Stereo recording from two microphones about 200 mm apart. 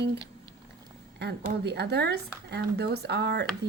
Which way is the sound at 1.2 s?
60° right (ahead or behind).